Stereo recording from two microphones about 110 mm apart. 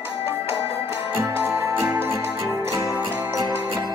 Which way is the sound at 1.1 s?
20° right (ahead or behind).